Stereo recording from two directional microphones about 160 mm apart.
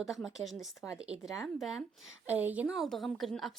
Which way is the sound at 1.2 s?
Centre (ahead or behind).